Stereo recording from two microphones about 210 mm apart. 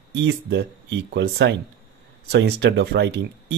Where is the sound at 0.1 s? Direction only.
55° right (ahead or behind).